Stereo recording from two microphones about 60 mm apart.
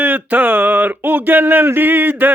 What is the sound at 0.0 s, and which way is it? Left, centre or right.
Speech, right.